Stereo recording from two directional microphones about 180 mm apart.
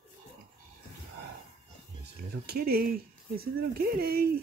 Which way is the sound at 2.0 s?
60° right (ahead or behind).